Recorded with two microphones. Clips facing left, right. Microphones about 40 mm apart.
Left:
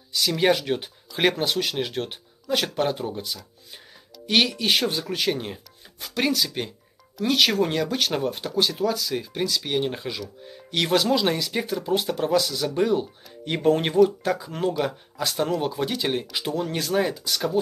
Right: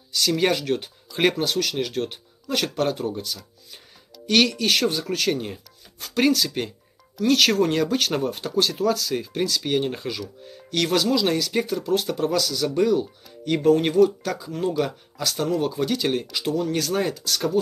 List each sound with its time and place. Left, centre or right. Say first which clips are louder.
0.3 s speech: even; centre